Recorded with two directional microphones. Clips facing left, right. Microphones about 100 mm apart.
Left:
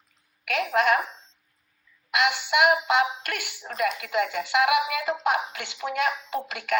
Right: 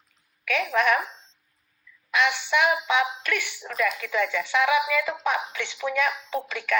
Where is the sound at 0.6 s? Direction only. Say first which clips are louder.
Left 1 dB; 40° left (ahead or behind).